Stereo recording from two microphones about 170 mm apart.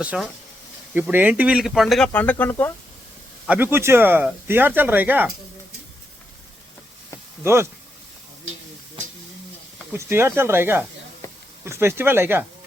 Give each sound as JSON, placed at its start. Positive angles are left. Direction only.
{"t": 0.0, "sound": "speech", "side_deg": -5}
{"t": 3.4, "sound": "speech", "side_deg": -10}
{"t": 7.4, "sound": "speech", "side_deg": -15}
{"t": 9.9, "sound": "speech", "side_deg": -15}
{"t": 11.2, "sound": "a sound", "side_deg": 15}
{"t": 11.6, "sound": "speech", "side_deg": -15}